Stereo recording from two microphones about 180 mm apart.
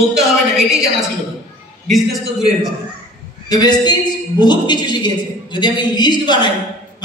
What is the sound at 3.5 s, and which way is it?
A man's voice, 25° left (ahead or behind).